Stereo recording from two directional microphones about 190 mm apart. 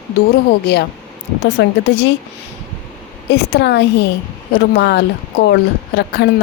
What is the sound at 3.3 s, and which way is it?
Speech, 65° left (ahead or behind).